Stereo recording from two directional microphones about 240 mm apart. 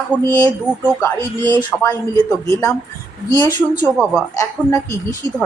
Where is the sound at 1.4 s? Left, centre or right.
Centre.